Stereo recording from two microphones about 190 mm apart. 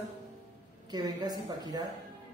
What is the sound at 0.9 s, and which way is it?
Speech, 20° right (ahead or behind).